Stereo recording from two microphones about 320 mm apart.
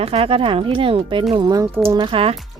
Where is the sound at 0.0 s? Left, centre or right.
Centre.